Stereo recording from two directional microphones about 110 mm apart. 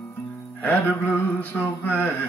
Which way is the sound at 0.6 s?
10° left (ahead or behind).